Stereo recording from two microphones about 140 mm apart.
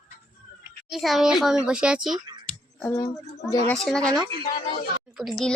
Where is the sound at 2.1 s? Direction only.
30° right (ahead or behind).